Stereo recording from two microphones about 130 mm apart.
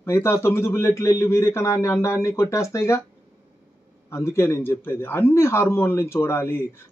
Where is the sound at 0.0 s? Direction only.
20° left (ahead or behind).